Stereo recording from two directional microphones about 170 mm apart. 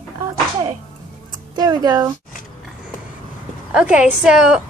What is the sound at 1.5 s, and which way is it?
Speech, 25° right (ahead or behind).